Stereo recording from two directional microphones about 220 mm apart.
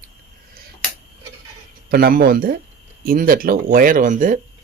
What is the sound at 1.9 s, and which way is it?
Speech, 45° right (ahead or behind).